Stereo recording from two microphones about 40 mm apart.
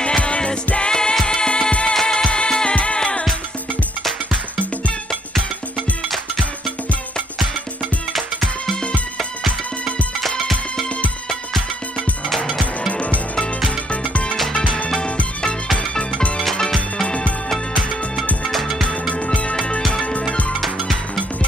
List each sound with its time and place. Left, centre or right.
0.0 s music: left
8.1 s music: centre
12.9 s music: left
18.4 s music: centre
19.2 s music: left